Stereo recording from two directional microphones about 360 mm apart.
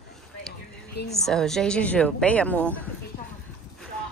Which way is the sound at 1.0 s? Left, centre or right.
Centre.